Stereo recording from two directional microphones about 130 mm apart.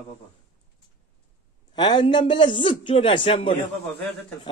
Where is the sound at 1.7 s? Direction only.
35° left (ahead or behind).